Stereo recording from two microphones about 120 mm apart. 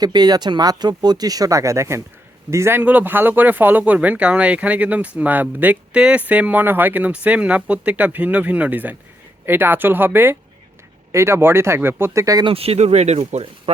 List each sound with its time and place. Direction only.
0.0 s speech: 35° right (ahead or behind)
12.5 s speech: 55° right (ahead or behind)